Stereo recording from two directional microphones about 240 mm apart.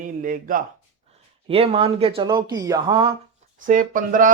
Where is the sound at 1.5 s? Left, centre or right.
Right.